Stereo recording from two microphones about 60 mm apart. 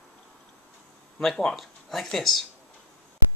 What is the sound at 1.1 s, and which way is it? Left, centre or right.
Speech, centre.